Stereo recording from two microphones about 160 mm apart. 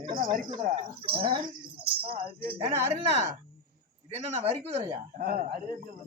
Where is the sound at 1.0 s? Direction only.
35° right (ahead or behind).